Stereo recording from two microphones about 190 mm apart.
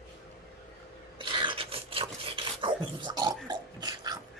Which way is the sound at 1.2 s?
25° right (ahead or behind).